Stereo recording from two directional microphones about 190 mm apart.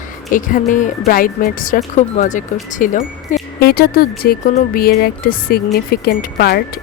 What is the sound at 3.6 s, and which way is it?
Speech, 55° left (ahead or behind).